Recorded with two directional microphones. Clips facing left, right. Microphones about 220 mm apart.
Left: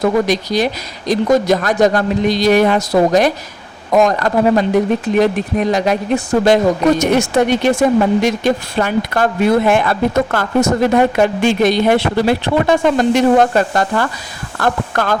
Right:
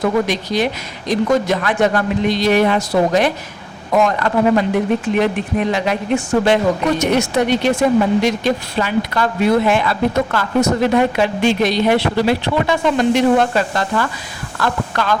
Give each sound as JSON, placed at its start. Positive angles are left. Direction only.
{"t": 0.0, "sound": "speech", "side_deg": 40}